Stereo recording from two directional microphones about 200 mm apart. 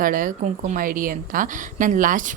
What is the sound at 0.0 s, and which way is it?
A woman's voice, 45° right (ahead or behind).